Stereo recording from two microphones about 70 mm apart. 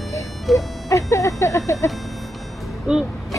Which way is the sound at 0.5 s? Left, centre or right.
Centre.